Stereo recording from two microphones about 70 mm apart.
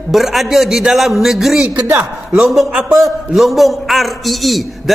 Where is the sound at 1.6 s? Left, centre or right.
Centre.